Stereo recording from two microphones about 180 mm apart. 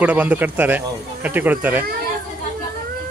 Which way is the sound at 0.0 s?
10° right (ahead or behind).